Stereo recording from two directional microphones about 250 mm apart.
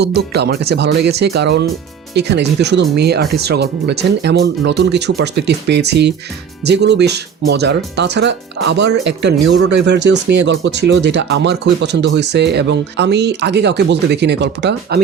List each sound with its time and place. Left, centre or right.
0.0 s speech: right
8.8 s speech: right
9.5 s speech: right